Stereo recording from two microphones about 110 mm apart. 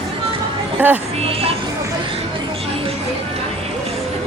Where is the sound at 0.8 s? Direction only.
15° right (ahead or behind).